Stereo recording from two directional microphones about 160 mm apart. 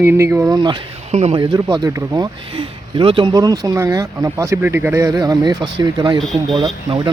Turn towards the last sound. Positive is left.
turn(degrees=-25)  # may be behind; listen again after turning